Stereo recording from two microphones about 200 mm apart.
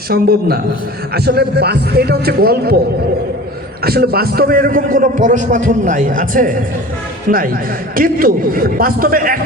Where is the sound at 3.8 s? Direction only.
50° right (ahead or behind).